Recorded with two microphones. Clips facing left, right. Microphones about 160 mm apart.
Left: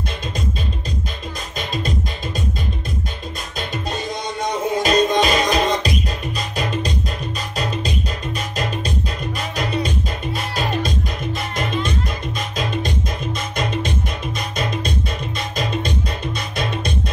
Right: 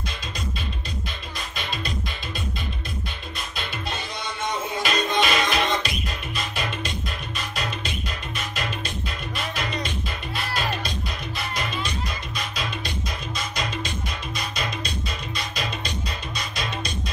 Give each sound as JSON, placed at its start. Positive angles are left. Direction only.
{"t": 3.5, "sound": "music", "side_deg": 40}
{"t": 15.3, "sound": "music", "side_deg": 50}